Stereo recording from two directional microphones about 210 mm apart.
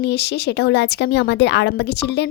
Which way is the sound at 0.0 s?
55° left (ahead or behind).